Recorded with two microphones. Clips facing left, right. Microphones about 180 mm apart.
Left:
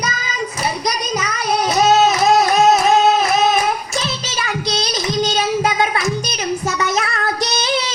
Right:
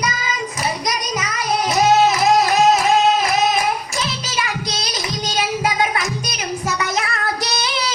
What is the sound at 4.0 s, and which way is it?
Child singing, 30° left (ahead or behind).